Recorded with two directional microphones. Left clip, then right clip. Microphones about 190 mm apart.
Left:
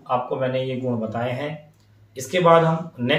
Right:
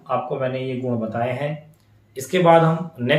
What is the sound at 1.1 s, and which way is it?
Speech, 25° right (ahead or behind).